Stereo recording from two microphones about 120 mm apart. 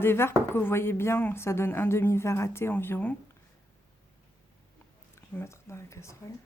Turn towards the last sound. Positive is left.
turn(degrees=25)  # may be behind; listen again after turning